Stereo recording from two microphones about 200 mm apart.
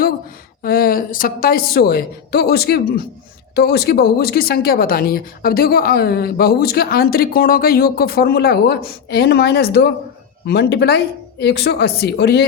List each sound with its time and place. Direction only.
0.6 s speech: 45° left (ahead or behind)